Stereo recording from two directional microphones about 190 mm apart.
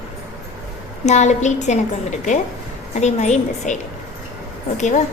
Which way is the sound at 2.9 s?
35° left (ahead or behind).